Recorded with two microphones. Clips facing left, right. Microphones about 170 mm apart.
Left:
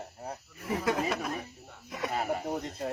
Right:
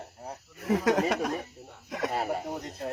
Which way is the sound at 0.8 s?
85° right.